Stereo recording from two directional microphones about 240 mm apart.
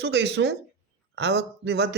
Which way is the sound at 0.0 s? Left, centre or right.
Right.